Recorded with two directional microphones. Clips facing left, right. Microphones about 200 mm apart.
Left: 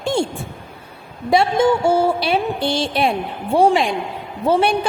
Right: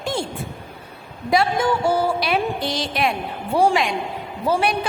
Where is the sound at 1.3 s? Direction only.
25° left (ahead or behind).